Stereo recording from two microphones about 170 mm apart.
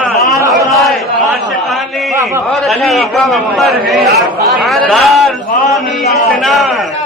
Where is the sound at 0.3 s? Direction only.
20° right (ahead or behind).